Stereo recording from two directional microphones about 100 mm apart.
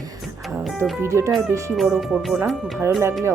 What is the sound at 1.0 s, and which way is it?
Speech, 30° right (ahead or behind).